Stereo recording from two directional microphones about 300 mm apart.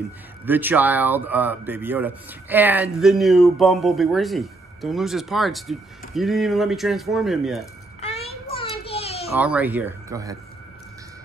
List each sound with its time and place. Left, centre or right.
0.5 s speech: centre
8.0 s child singing: centre
9.4 s speech: centre